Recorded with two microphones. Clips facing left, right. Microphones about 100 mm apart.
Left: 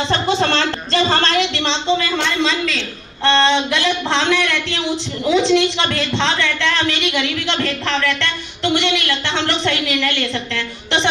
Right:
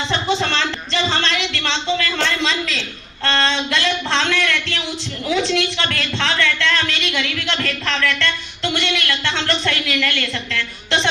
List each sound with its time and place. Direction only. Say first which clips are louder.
0.1 s speech: left 2 dB; 40° left (ahead or behind)
1.5 s speech: left 3 dB; 20° left (ahead or behind)
2.1 s a man's voice: left 2 dB; 5° left (ahead or behind)
3.2 s speech: left 5 dB; 20° left (ahead or behind)